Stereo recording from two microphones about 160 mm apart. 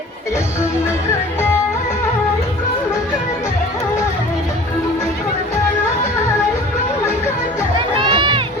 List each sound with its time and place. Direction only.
7.9 s run: 30° right (ahead or behind)